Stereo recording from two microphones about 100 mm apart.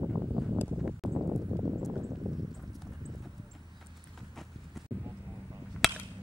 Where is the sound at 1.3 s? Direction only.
15° right (ahead or behind).